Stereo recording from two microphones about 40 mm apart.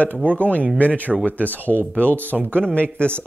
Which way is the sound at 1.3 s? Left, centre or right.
Right.